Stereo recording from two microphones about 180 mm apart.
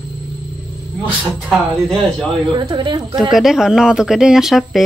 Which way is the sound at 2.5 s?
25° right (ahead or behind).